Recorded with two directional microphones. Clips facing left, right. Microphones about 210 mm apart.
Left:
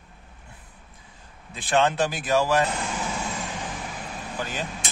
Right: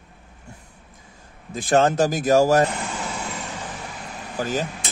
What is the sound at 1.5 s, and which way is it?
Speech, 40° right (ahead or behind).